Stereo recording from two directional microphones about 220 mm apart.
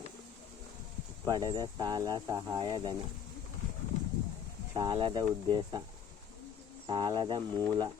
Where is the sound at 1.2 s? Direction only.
15° right (ahead or behind).